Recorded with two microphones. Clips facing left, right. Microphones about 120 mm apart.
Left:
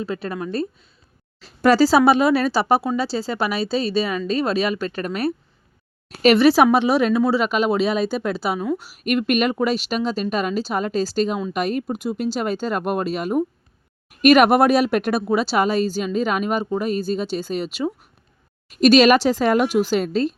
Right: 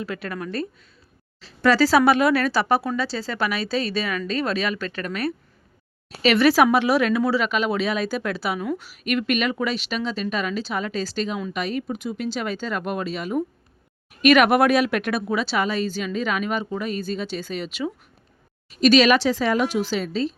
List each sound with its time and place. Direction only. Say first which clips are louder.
0.0 s speech: left 3 dB; 30° left (ahead or behind)
1.4 s speech: left 3 dB; 45° left (ahead or behind)
6.3 s speech: left 2 dB; 30° left (ahead or behind)
8.8 s speech: left 3 dB; 40° left (ahead or behind)
18.7 s speech: left 3 dB; 45° left (ahead or behind)